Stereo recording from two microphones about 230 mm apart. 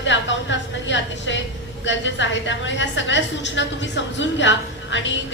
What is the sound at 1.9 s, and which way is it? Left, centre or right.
A woman's voice, left.